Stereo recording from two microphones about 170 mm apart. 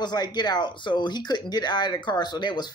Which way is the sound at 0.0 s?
25° left (ahead or behind).